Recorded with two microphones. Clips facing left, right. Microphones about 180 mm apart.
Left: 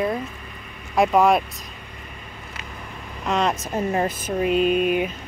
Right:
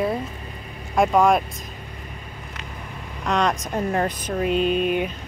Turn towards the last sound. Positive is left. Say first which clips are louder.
# left 1 dB
turn(degrees=5)  # may be behind; listen again after turning